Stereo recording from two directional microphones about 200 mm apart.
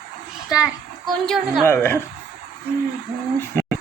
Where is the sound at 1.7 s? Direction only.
10° left (ahead or behind).